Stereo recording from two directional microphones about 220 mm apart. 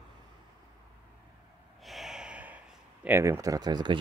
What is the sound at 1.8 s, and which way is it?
Sigh, centre (ahead or behind).